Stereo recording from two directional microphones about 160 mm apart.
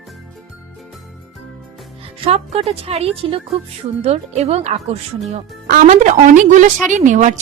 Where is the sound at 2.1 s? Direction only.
40° right (ahead or behind).